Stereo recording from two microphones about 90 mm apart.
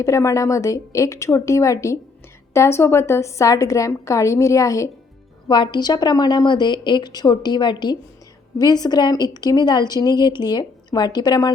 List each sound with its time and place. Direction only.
0.0 s a woman's voice: 35° left (ahead or behind)
5.5 s a woman's voice: 60° left (ahead or behind)
8.5 s a woman's voice: 45° left (ahead or behind)